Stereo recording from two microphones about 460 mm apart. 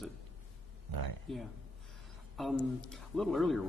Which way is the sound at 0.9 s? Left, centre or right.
Right.